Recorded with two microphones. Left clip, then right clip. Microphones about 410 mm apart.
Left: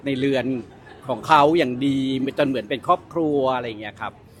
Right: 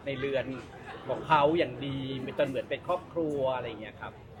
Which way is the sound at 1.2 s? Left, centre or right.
Left.